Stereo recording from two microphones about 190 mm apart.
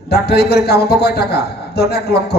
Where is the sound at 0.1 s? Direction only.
60° left (ahead or behind).